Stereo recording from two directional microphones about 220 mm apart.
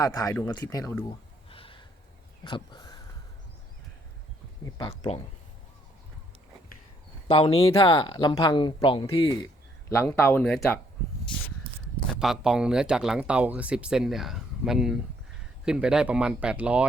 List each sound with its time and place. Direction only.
0.0 s speech: 15° left (ahead or behind)
1.5 s gasp: 25° left (ahead or behind)
2.4 s a sound: 20° left (ahead or behind)
4.6 s speech: 15° left (ahead or behind)
7.3 s speech: 25° left (ahead or behind); by 10.8 s 5° left (ahead or behind)
12.2 s speech: centre (ahead or behind)